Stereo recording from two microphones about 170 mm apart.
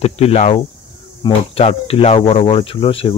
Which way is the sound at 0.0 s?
40° left (ahead or behind).